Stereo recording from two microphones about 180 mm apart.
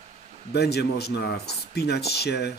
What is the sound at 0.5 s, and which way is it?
Speech, 65° left (ahead or behind).